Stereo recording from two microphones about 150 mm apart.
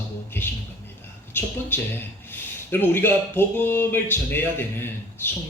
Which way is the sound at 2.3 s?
15° left (ahead or behind).